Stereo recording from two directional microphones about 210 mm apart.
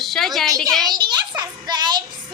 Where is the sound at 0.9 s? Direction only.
20° right (ahead or behind).